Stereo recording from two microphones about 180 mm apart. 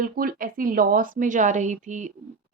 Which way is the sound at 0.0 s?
50° right (ahead or behind).